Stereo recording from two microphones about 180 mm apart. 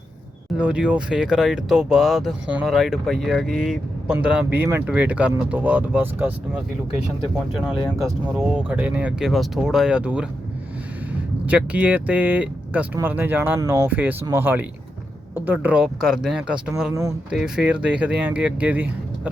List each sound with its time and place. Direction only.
0.6 s speech: 5° right (ahead or behind)
7.5 s speech: centre (ahead or behind)
11.4 s speech: 10° right (ahead or behind)
16.9 s speech: 20° right (ahead or behind)
17.3 s speech: 5° right (ahead or behind)